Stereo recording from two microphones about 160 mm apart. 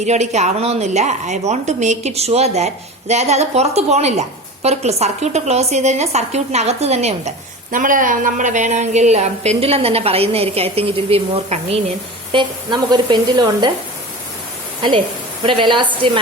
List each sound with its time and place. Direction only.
0.0 s a woman's voice: 45° right (ahead or behind)
12.3 s a woman's voice: 30° right (ahead or behind)
15.4 s a woman's voice: 30° right (ahead or behind)